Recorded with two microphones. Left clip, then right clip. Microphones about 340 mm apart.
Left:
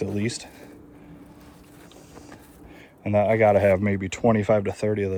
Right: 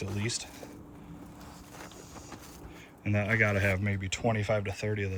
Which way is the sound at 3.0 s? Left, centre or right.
Centre.